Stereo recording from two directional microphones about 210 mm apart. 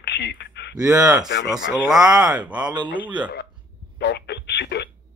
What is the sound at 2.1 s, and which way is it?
Speech, 5° right (ahead or behind).